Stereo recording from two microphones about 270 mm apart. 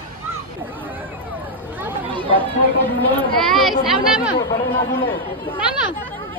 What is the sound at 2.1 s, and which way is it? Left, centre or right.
Chatter, centre.